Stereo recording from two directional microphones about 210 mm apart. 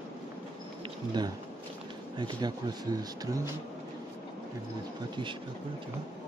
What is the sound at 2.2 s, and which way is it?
Speech, 20° right (ahead or behind).